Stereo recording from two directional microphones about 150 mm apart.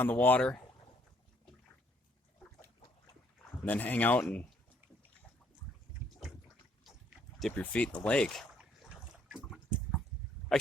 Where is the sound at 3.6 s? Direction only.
10° left (ahead or behind).